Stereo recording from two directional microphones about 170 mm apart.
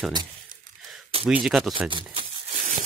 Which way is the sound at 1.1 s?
35° right (ahead or behind).